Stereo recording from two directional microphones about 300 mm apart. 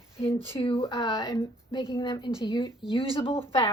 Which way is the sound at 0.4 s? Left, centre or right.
Centre.